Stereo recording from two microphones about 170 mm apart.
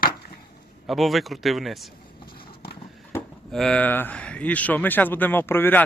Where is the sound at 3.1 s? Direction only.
15° left (ahead or behind).